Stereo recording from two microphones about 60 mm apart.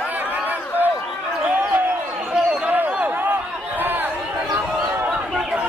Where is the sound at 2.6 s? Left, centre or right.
Right.